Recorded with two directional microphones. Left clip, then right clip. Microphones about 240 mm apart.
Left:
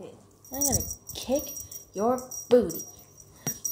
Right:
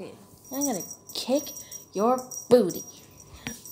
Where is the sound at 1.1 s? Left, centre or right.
Right.